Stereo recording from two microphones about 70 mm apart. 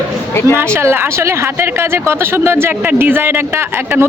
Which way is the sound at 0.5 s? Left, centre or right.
Right.